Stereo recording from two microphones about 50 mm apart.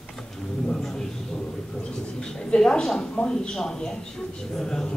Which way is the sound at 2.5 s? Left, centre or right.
Centre.